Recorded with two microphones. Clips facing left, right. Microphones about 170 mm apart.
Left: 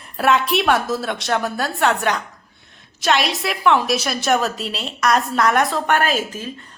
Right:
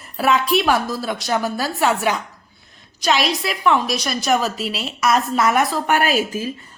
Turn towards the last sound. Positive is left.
turn(degrees=-10)  # may be behind; listen again after turning